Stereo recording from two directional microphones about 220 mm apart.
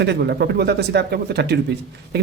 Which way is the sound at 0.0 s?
50° right (ahead or behind).